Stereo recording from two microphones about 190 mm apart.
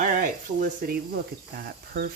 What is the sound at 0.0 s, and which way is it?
Speech, 45° right (ahead or behind).